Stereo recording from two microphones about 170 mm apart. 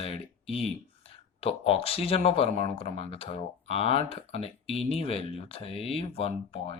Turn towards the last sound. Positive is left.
turn(degrees=35)  # may be behind; listen again after turning